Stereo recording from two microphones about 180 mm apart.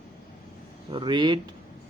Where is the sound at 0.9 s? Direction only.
25° right (ahead or behind).